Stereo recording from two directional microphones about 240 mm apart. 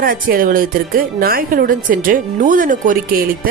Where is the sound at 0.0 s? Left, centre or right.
Right.